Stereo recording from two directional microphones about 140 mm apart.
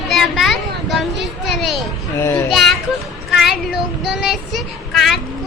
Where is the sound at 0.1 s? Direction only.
Centre (ahead or behind).